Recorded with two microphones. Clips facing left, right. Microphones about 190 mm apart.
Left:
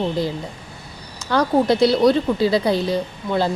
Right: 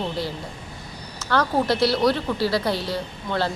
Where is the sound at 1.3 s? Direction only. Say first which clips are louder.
Left 4 dB; 15° left (ahead or behind).